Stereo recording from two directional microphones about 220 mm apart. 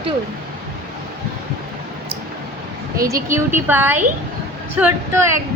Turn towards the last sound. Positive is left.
turn(degrees=-10)  # may be behind; listen again after turning